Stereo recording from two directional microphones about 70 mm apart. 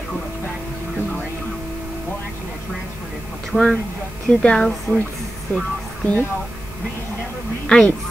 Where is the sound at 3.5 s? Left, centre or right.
Centre.